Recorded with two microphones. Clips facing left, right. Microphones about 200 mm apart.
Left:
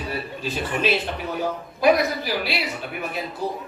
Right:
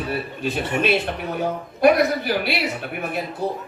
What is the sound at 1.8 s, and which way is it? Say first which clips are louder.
Speech: right 3 dB; 60° right (ahead or behind).